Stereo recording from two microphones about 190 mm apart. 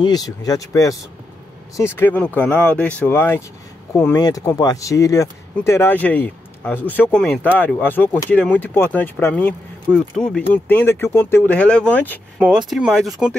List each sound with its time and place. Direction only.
0.0 s speech: 20° left (ahead or behind)
12.4 s speech: 5° right (ahead or behind)